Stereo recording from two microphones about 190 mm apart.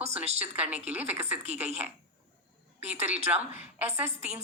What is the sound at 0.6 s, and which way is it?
Speech, 5° right (ahead or behind).